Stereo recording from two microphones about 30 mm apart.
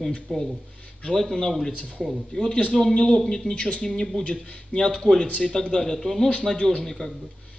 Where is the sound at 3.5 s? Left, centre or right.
Left.